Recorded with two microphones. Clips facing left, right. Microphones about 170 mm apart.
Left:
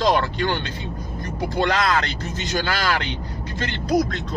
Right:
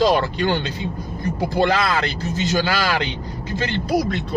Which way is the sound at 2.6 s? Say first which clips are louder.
Right 2 dB; 15° right (ahead or behind).